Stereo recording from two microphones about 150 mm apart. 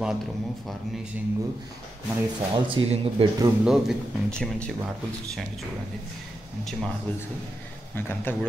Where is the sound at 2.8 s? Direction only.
35° right (ahead or behind).